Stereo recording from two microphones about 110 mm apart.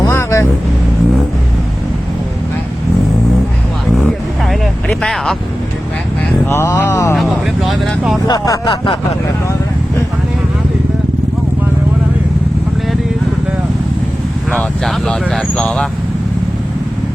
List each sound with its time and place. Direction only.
0.1 s vehicle: 25° left (ahead or behind)
4.6 s vehicle: centre (ahead or behind)
6.5 s speech: 30° left (ahead or behind)
7.2 s speech: centre (ahead or behind)
8.3 s speech: 35° left (ahead or behind)
14.8 s speech: 5° left (ahead or behind)